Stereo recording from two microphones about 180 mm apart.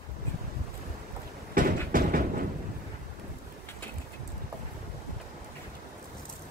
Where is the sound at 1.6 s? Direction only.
50° right (ahead or behind).